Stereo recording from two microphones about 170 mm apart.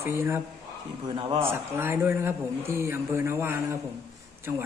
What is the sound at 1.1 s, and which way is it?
Speech, 35° right (ahead or behind).